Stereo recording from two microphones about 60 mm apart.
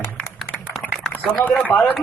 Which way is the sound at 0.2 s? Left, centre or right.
Centre.